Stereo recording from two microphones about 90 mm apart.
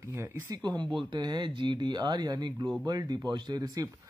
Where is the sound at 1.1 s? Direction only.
55° right (ahead or behind).